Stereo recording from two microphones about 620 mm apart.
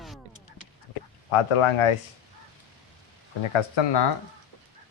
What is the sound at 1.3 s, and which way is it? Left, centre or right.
Speech, left.